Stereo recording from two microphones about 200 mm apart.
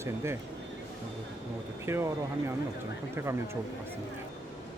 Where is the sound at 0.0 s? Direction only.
15° right (ahead or behind).